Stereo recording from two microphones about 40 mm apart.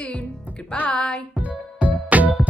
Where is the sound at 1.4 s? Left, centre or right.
Right.